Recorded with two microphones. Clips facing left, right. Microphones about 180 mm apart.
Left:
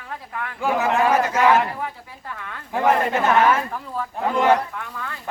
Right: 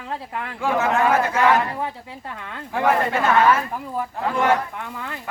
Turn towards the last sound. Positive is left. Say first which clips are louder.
# right 1 dB
turn(degrees=-20)  # may be behind; listen again after turning